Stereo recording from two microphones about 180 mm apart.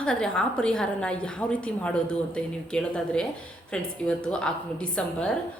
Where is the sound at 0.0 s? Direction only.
5° left (ahead or behind).